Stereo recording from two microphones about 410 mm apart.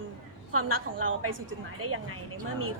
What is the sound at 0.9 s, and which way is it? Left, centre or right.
A woman's voice, right.